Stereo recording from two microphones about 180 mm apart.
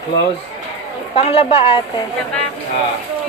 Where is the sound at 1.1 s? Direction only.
30° left (ahead or behind).